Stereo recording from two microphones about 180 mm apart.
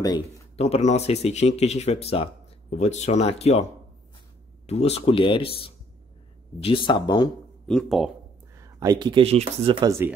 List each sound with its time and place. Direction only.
0.6 s speech: 35° left (ahead or behind)
4.6 s speech: 35° left (ahead or behind)
7.6 s speech: centre (ahead or behind)
8.5 s speech: 20° right (ahead or behind)
9.8 s speech: 15° right (ahead or behind)